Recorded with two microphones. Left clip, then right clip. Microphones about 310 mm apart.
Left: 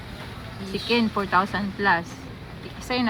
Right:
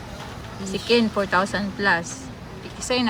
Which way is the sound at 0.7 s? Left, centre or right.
Right.